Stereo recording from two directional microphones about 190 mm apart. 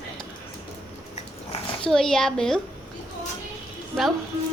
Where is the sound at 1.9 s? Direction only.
5° left (ahead or behind).